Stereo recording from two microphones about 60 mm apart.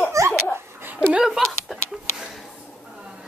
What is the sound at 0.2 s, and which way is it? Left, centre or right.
Dog, right.